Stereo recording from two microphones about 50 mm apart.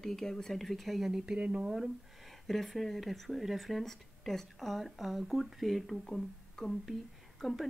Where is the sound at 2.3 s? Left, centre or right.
Centre.